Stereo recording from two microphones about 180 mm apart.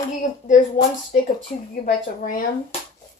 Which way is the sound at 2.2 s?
50° left (ahead or behind).